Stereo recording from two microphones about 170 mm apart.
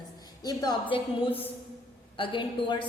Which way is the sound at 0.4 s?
25° left (ahead or behind).